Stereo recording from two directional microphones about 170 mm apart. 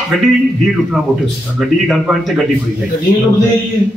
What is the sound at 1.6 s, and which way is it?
Speech, centre (ahead or behind).